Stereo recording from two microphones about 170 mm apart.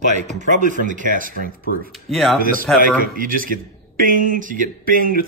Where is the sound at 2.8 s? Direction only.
55° right (ahead or behind).